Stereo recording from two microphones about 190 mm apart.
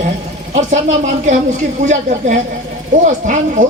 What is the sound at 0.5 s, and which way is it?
Speech, 40° right (ahead or behind).